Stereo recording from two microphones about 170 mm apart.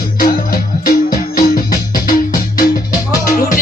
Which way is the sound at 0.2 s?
60° left (ahead or behind).